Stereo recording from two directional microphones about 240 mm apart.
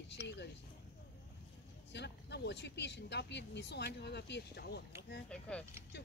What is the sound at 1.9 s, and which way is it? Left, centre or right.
Speech, left.